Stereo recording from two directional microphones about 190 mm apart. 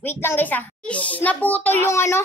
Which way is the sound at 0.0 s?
10° left (ahead or behind).